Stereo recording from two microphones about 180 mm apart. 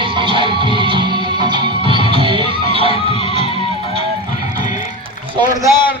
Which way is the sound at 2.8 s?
30° left (ahead or behind).